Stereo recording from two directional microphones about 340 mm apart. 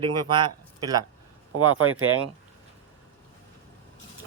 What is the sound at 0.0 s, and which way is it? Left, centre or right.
Speech, centre.